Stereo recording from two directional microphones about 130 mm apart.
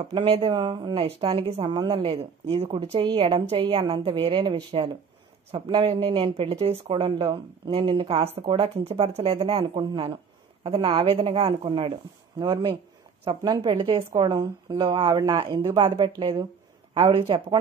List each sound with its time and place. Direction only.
0.0 s speech: 40° right (ahead or behind)